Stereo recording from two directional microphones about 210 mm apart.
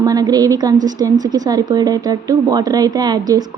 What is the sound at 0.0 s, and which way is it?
A woman's voice, 15° right (ahead or behind).